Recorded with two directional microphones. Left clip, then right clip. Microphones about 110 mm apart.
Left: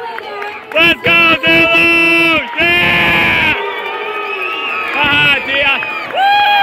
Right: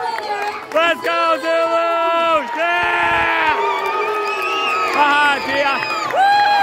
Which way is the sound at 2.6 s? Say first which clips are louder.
Left 7 dB; 15° right (ahead or behind).